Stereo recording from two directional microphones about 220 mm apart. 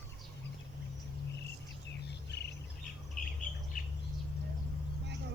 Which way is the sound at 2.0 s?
50° left (ahead or behind).